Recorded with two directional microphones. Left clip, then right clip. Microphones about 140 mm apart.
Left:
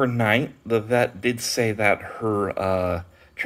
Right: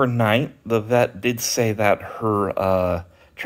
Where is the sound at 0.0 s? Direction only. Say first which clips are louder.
Right 2 dB; 35° right (ahead or behind).